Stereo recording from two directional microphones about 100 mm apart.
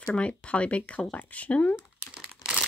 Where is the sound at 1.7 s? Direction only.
10° right (ahead or behind).